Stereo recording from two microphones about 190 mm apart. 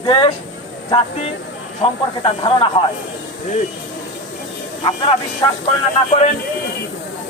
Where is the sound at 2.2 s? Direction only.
25° left (ahead or behind).